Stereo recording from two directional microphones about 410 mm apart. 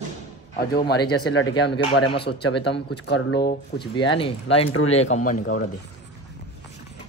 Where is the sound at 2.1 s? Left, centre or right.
Left.